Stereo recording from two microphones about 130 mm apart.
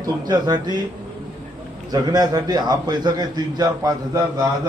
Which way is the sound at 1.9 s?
30° right (ahead or behind).